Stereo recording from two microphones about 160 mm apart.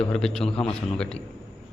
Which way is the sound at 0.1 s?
5° left (ahead or behind).